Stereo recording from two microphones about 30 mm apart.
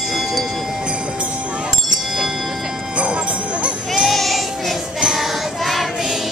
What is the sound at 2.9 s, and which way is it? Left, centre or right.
Jingle bell, right.